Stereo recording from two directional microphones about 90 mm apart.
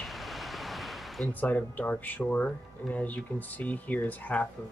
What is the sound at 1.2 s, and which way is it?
Speech, 20° left (ahead or behind).